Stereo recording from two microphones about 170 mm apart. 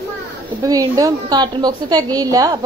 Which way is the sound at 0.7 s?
20° right (ahead or behind).